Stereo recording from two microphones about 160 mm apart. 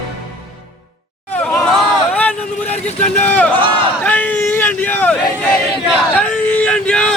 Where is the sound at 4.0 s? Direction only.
10° left (ahead or behind).